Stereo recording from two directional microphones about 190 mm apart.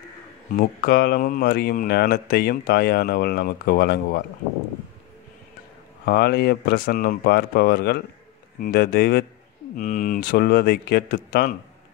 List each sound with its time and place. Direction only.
0.6 s speech: 50° left (ahead or behind)
6.0 s speech: 55° left (ahead or behind)